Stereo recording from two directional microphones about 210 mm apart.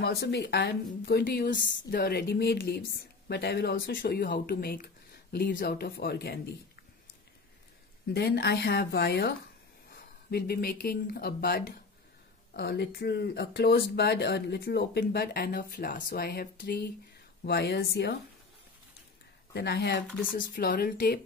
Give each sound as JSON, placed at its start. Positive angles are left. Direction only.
{"t": 0.0, "sound": "speech", "side_deg": 50}
{"t": 8.1, "sound": "speech", "side_deg": 50}
{"t": 19.5, "sound": "speech", "side_deg": 50}
{"t": 20.3, "sound": "speech", "side_deg": 40}